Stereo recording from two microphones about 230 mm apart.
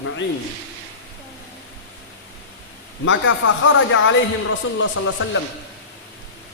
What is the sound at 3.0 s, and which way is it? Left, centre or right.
Speech, left.